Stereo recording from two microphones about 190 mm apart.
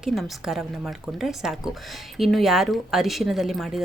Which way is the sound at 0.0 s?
Centre (ahead or behind).